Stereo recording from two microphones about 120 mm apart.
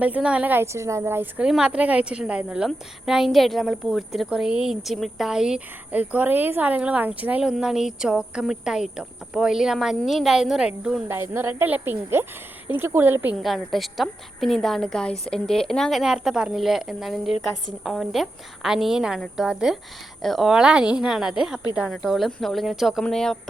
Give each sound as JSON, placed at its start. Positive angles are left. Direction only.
{"t": 0.0, "sound": "a woman's voice", "side_deg": -10}
{"t": 1.5, "sound": "a woman's voice", "side_deg": -5}
{"t": 11.1, "sound": "a woman's voice", "side_deg": -20}
{"t": 13.3, "sound": "a woman's voice", "side_deg": 0}